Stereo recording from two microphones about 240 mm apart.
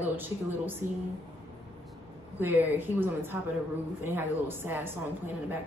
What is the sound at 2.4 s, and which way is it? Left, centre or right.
A woman's voice, centre.